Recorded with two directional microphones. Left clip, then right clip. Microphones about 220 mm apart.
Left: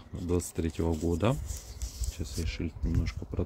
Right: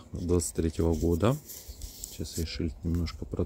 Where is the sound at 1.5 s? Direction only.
Centre (ahead or behind).